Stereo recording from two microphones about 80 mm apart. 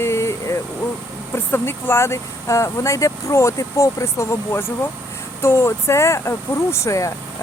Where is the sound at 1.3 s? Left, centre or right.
Left.